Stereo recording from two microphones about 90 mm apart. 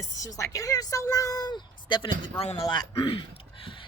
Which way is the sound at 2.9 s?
75° left (ahead or behind).